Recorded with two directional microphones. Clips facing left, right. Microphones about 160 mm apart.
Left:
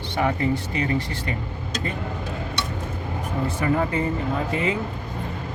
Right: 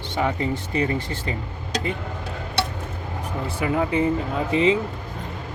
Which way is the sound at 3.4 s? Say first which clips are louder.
Even; 15° right (ahead or behind).